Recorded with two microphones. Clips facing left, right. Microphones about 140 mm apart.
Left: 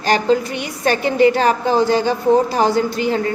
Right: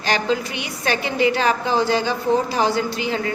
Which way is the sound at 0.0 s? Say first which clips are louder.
Left 5 dB; 45° left (ahead or behind).